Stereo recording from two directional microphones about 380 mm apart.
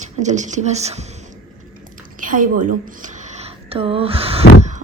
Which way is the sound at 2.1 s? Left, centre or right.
Right.